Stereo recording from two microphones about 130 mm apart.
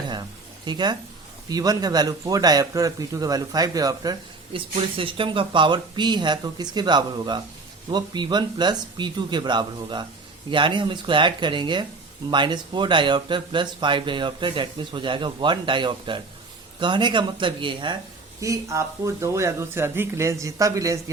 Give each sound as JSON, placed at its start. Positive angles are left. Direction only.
{"t": 0.1, "sound": "a sound", "side_deg": -35}
{"t": 1.5, "sound": "a man's voice", "side_deg": -30}
{"t": 4.5, "sound": "speech", "side_deg": -40}
{"t": 18.3, "sound": "a man's voice", "side_deg": -25}